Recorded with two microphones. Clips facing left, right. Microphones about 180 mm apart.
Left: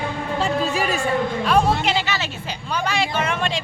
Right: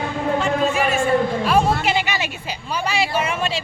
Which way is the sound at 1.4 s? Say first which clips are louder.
Even; centre (ahead or behind).